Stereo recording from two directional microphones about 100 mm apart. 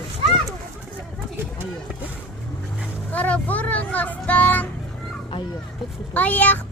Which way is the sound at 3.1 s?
15° left (ahead or behind).